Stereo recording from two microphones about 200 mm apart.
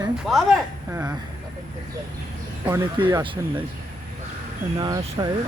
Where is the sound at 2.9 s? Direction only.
25° right (ahead or behind).